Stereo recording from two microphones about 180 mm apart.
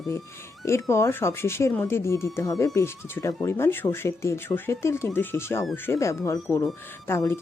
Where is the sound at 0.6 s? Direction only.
15° left (ahead or behind).